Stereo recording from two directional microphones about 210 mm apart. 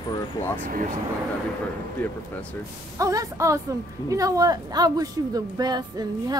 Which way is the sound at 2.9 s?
15° right (ahead or behind).